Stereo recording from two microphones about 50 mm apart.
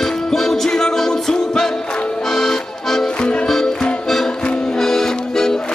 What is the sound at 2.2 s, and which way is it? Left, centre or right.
Accordion, centre.